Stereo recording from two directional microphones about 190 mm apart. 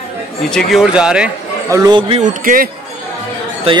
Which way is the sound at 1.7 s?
20° right (ahead or behind).